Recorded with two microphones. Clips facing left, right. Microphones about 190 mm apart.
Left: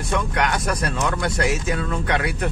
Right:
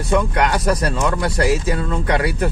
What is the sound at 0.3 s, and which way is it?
Speech, 30° right (ahead or behind).